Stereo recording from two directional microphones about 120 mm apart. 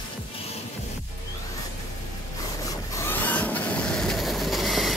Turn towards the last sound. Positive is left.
turn(degrees=0)  # may be behind; listen again after turning